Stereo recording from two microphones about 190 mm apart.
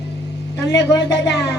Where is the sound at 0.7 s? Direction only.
15° left (ahead or behind).